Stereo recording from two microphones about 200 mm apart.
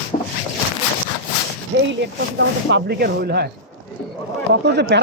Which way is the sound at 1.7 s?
65° right (ahead or behind).